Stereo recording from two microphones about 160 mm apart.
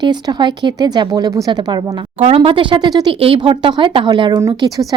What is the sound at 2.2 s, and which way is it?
Speech, 40° right (ahead or behind).